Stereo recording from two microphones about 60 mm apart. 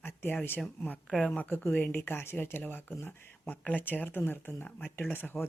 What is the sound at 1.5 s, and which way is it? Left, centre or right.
Speech, left.